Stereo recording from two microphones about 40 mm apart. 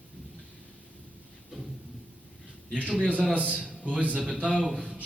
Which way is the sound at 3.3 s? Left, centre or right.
Right.